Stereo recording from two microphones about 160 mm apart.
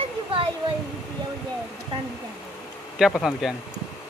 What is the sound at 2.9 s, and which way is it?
Speech, centre (ahead or behind).